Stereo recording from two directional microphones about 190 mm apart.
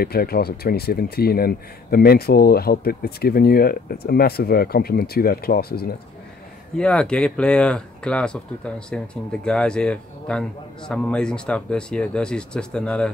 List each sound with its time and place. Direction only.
0.0 s speech: 55° left (ahead or behind)
6.8 s speech: 5° left (ahead or behind)